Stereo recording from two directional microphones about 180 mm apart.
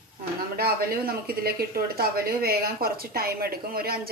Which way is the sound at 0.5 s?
60° right (ahead or behind).